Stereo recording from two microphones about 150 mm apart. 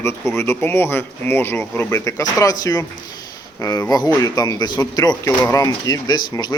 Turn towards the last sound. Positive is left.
turn(degrees=30)  # may be behind; listen again after turning